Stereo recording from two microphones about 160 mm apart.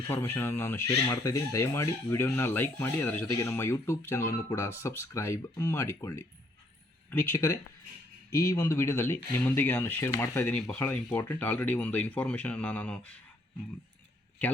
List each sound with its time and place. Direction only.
0.1 s speech: 15° left (ahead or behind)